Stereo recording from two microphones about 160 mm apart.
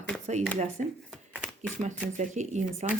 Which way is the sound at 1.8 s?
45° right (ahead or behind).